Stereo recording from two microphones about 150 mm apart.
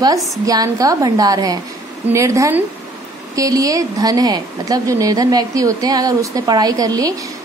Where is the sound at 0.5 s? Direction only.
25° right (ahead or behind).